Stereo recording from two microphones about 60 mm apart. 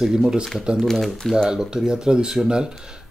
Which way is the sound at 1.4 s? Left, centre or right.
Centre.